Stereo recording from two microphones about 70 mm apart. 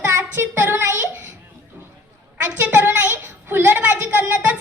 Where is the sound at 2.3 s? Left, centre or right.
Right.